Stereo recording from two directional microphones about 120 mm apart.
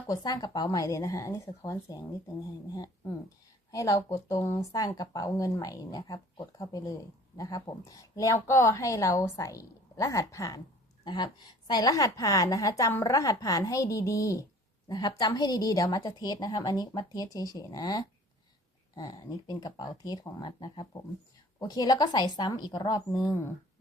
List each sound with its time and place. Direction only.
0.1 s a woman's voice: 30° left (ahead or behind)
11.0 s a woman's voice: 35° left (ahead or behind)